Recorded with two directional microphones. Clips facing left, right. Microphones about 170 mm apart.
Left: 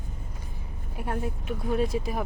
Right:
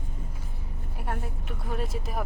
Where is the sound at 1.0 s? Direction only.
Centre (ahead or behind).